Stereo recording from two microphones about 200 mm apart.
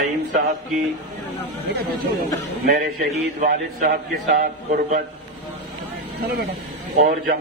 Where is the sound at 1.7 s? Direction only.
50° right (ahead or behind).